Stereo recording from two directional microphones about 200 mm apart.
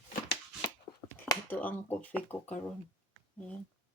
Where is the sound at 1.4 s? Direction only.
10° left (ahead or behind).